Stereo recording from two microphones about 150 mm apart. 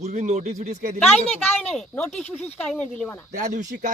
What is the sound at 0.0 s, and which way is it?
Speech, 50° right (ahead or behind).